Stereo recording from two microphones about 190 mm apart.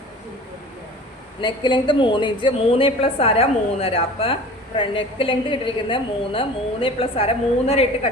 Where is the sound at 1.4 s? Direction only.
25° left (ahead or behind).